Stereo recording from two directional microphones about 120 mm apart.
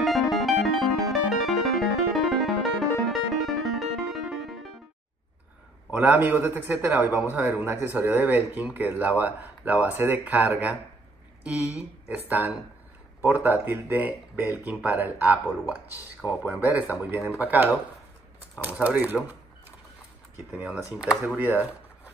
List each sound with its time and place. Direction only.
0.0 s music: centre (ahead or behind)
5.9 s speech: 15° right (ahead or behind)
13.2 s speech: 15° right (ahead or behind)
16.2 s speech: 35° left (ahead or behind)
16.6 s speech: 15° right (ahead or behind)
20.5 s speech: 10° right (ahead or behind)
21.4 s a sound: 15° right (ahead or behind)